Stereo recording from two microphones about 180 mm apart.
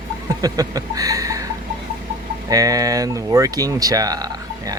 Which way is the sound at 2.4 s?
20° right (ahead or behind).